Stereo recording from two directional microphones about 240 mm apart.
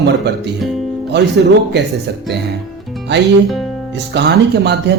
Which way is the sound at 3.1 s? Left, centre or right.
Right.